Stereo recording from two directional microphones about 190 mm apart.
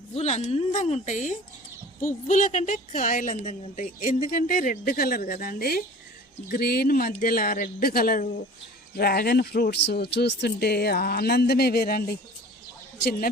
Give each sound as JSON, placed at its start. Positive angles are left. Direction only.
{"t": 0.1, "sound": "a woman's voice", "side_deg": 35}